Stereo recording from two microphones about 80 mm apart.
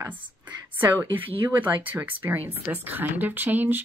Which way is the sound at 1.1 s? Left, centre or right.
Right.